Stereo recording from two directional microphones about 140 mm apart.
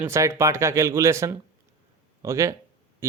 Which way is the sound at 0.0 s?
20° right (ahead or behind).